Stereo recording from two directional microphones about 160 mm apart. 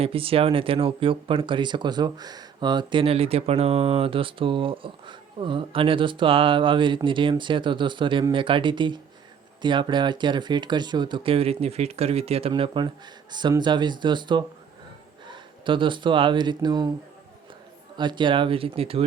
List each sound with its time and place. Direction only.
0.0 s speech: 35° right (ahead or behind)
17.9 s speech: 30° right (ahead or behind)